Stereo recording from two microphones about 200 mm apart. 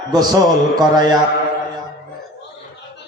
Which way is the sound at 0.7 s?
20° right (ahead or behind).